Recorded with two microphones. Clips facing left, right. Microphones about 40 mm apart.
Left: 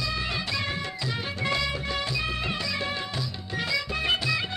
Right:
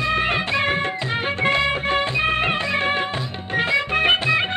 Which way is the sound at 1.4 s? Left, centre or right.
Right.